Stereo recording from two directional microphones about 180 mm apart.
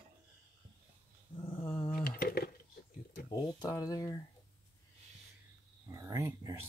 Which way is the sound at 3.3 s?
20° left (ahead or behind).